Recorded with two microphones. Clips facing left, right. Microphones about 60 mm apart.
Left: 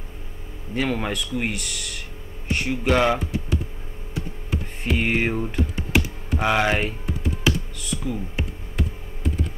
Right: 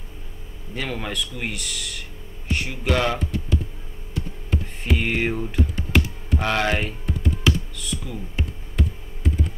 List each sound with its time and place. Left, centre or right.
0.7 s speech: centre
2.8 s speech: centre
4.8 s music: centre
6.4 s speech: centre
7.4 s music: centre
8.0 s speech: centre